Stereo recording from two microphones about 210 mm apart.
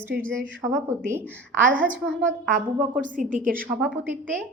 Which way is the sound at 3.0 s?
40° right (ahead or behind).